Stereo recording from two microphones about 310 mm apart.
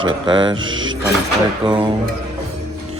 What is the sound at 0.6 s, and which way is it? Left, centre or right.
Speech, right.